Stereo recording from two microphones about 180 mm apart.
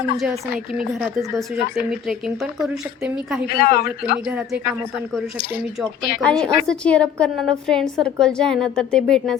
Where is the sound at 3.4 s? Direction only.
55° left (ahead or behind).